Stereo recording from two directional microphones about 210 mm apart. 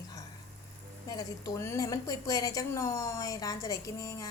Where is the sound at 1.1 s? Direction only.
15° left (ahead or behind).